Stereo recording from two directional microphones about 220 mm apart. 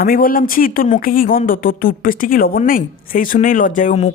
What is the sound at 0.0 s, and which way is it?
A woman's voice, 40° left (ahead or behind).